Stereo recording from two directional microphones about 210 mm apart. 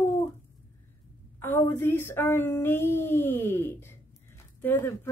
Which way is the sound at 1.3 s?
10° left (ahead or behind).